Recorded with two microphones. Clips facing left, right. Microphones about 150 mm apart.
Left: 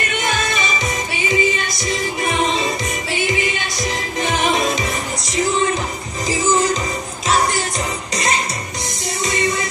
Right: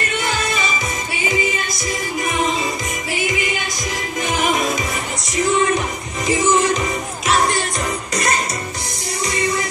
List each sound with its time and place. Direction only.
0.2 s music: 20° left (ahead or behind)
1.9 s music: 25° left (ahead or behind)
6.2 s music: 30° left (ahead or behind)
8.1 s music: 25° left (ahead or behind)